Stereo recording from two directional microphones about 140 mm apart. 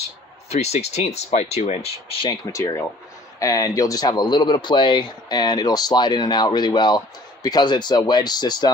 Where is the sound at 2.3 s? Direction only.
20° left (ahead or behind).